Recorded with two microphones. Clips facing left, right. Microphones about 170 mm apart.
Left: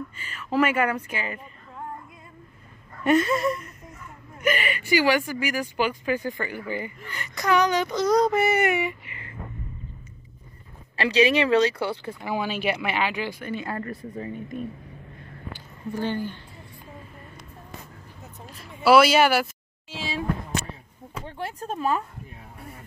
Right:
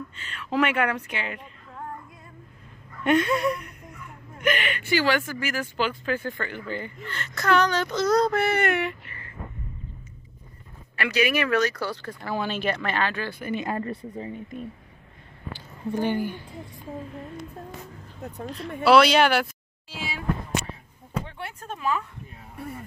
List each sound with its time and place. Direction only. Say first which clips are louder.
0.1 s speech: left 1 dB; 5° left (ahead or behind)
3.0 s speech: left 1 dB; 5° left (ahead or behind)
11.0 s speech: left 4 dB; 30° left (ahead or behind); by 13.4 s 15° left (ahead or behind)
13.5 s speech: right 2 dB; 20° right (ahead or behind)
15.9 s speech: right 2 dB; 15° right (ahead or behind)
18.9 s speech: left 1 dB; 5° left (ahead or behind)
20.0 s a sound: left 4 dB; 30° left (ahead or behind)
21.3 s speech: left 5 dB; 35° left (ahead or behind)